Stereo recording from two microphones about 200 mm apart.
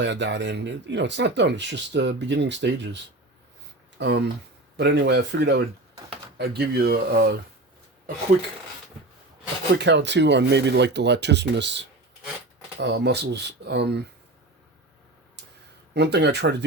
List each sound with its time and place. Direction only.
0.0 s speech: 60° right (ahead or behind)
9.7 s speech: 60° right (ahead or behind)
16.0 s speech: 55° right (ahead or behind)